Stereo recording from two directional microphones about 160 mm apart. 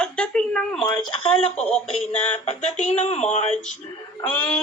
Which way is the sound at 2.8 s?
45° left (ahead or behind).